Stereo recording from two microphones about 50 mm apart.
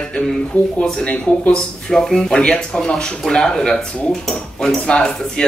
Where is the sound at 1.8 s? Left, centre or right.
Centre.